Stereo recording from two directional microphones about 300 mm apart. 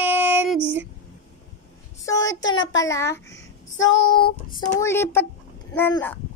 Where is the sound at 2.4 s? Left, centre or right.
Centre.